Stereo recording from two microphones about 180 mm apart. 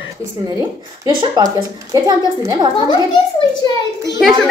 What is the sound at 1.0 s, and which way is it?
A woman's voice, 20° right (ahead or behind).